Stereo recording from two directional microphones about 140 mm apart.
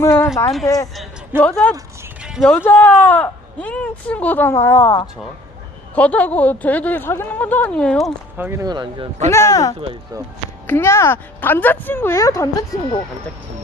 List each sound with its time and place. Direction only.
0.0 s speech: 20° left (ahead or behind)
1.4 s speech: 10° left (ahead or behind)
2.2 s music: 5° right (ahead or behind)
2.6 s speech: 15° left (ahead or behind)
8.4 s speech: 15° right (ahead or behind)
8.6 s speech: 30° right (ahead or behind)
9.3 s speech: 25° left (ahead or behind)